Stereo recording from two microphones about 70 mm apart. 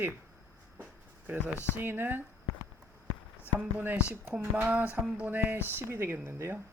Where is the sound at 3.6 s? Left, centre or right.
Right.